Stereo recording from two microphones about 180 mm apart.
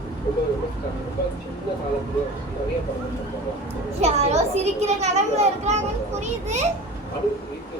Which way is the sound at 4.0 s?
35° right (ahead or behind).